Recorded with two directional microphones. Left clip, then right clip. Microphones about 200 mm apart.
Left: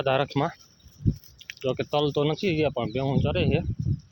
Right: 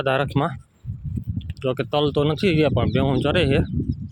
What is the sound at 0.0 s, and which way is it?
Speech, 10° right (ahead or behind).